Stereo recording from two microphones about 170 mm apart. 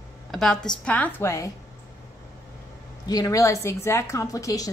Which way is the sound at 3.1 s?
20° left (ahead or behind).